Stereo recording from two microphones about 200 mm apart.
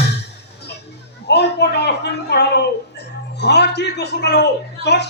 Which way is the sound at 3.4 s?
55° left (ahead or behind).